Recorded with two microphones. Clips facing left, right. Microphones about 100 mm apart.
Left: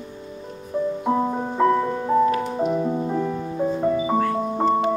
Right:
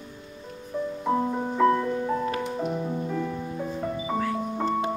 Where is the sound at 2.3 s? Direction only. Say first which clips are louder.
Left 6 dB; 35° left (ahead or behind).